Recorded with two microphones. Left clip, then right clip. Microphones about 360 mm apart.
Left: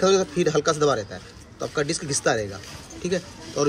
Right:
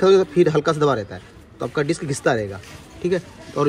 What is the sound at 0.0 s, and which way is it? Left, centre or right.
A man's voice, centre.